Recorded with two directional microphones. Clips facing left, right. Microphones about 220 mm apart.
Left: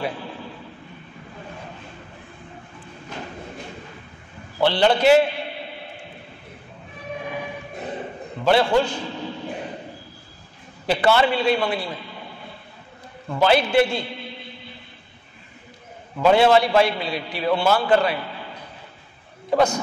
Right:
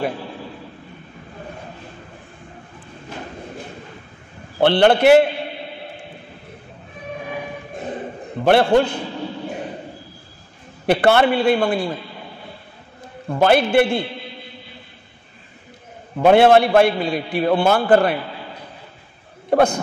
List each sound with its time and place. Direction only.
4.6 s a man's voice: 60° right (ahead or behind)
8.5 s a man's voice: 55° right (ahead or behind)
10.9 s a man's voice: 55° right (ahead or behind)
13.3 s a man's voice: 50° right (ahead or behind)
16.2 s a man's voice: 55° right (ahead or behind)
19.5 s a man's voice: 55° right (ahead or behind)